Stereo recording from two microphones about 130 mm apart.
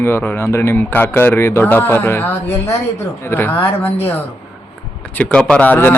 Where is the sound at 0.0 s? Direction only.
20° left (ahead or behind).